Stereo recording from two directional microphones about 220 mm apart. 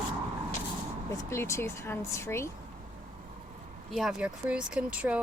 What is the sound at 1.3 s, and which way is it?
Speech, 10° left (ahead or behind).